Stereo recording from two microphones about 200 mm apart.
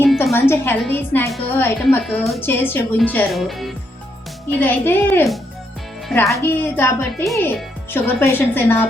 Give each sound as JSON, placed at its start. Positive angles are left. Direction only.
{"t": 0.0, "sound": "music", "side_deg": 5}
{"t": 0.3, "sound": "speech", "side_deg": 10}